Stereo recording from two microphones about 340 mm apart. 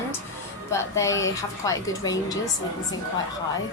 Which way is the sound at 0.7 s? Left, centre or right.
Centre.